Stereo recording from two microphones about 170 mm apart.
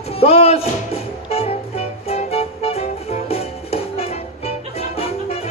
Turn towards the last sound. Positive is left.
turn(degrees=35)  # may be behind; listen again after turning